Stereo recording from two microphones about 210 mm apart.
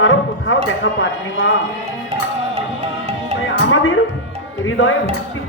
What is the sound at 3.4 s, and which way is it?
Music, 65° left (ahead or behind).